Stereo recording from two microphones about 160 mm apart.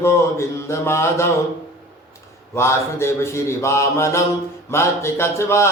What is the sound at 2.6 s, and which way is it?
Speech, 15° left (ahead or behind).